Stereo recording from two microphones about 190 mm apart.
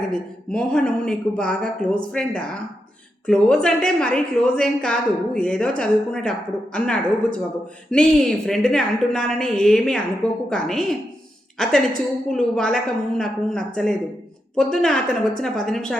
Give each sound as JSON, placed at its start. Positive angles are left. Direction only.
{"t": 0.1, "sound": "a woman's voice", "side_deg": 5}